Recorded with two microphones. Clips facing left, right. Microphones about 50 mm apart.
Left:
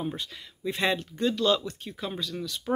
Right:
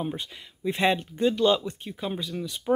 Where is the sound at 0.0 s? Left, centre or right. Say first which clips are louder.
Right 1 dB; centre.